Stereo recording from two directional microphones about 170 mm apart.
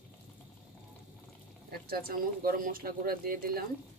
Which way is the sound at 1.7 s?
60° right (ahead or behind).